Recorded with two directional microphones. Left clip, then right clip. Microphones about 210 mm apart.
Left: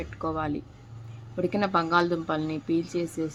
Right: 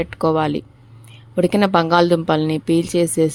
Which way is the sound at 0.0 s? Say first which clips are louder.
Right 13 dB; 45° right (ahead or behind).